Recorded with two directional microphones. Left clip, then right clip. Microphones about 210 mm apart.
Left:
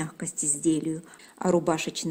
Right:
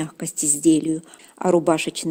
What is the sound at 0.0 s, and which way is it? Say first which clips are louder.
A woman's voice: right 6 dB; 40° right (ahead or behind).